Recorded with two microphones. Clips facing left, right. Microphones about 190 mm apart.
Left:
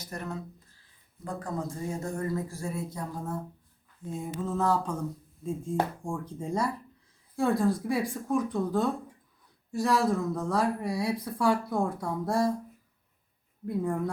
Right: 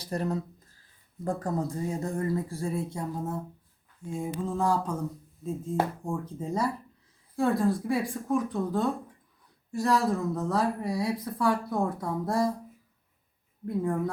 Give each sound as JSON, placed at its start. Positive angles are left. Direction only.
{"t": 0.0, "sound": "speech", "side_deg": -35}
{"t": 4.4, "sound": "a sound", "side_deg": -10}
{"t": 5.4, "sound": "speech", "side_deg": -5}
{"t": 13.7, "sound": "speech", "side_deg": 0}